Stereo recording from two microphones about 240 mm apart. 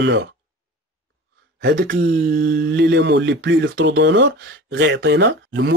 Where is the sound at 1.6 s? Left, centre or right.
Right.